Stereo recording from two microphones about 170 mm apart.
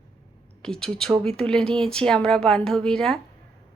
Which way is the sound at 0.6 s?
5° left (ahead or behind).